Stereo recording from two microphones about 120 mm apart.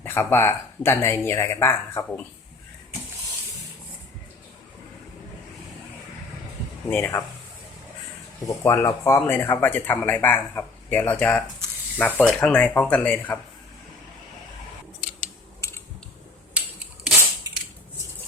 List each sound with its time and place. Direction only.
0.0 s speech: 20° left (ahead or behind)
6.9 s speech: 20° left (ahead or behind)
8.4 s speech: 25° left (ahead or behind)
16.6 s rub: 10° right (ahead or behind)